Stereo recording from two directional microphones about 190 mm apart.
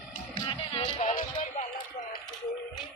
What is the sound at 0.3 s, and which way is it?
Music, 25° left (ahead or behind).